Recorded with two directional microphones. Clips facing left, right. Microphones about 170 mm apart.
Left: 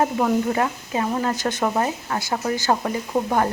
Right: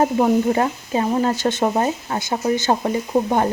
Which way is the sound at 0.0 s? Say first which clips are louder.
Right 4 dB; 25° right (ahead or behind).